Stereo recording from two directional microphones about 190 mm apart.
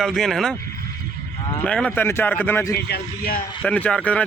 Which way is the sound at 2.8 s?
55° left (ahead or behind).